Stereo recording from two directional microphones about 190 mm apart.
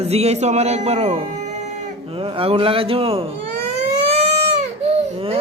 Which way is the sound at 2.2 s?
30° right (ahead or behind).